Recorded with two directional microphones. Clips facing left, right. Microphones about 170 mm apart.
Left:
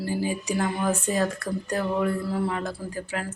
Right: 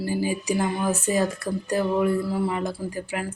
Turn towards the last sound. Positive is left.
turn(degrees=-10)  # may be behind; listen again after turning